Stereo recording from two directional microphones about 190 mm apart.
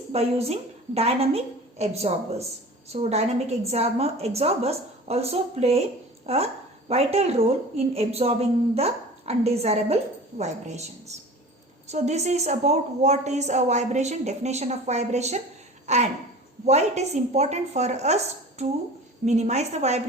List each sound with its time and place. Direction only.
0.1 s a woman's voice: 35° right (ahead or behind)
15.9 s a sound: 35° right (ahead or behind)
16.6 s a woman's voice: 35° right (ahead or behind)
19.2 s a woman's voice: 35° right (ahead or behind)